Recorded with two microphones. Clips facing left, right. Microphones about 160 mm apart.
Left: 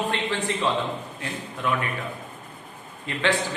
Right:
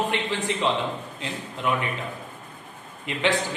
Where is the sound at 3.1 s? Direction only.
15° right (ahead or behind).